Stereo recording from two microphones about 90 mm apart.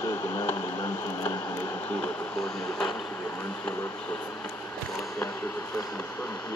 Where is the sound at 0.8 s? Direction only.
40° left (ahead or behind); by 2.3 s 20° left (ahead or behind).